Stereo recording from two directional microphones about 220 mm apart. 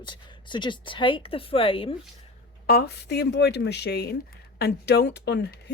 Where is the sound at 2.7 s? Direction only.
45° left (ahead or behind).